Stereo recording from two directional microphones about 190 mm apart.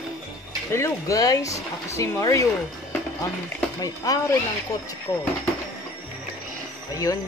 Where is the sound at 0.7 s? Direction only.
15° left (ahead or behind).